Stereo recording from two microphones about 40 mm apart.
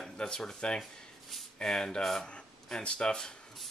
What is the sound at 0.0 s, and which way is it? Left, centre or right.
Speech, centre.